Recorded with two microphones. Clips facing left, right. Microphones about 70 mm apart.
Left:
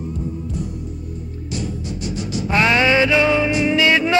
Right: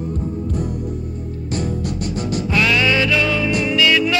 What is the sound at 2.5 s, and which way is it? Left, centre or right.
Music, left.